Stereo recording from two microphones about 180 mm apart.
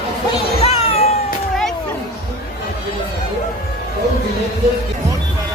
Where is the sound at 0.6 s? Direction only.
35° left (ahead or behind).